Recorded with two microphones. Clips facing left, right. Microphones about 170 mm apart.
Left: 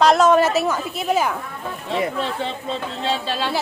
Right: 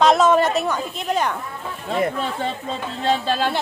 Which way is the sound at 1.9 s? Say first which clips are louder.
Right 1 dB; 45° right (ahead or behind).